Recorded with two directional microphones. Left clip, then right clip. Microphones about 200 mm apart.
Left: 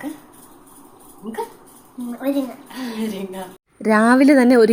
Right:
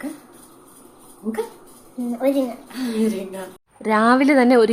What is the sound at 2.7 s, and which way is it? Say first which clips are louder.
A woman's voice: right 4 dB; 5° left (ahead or behind).